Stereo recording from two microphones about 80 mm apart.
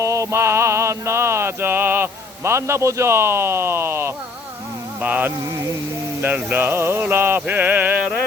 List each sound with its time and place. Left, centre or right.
0.0 s mantra: right
4.9 s mantra: right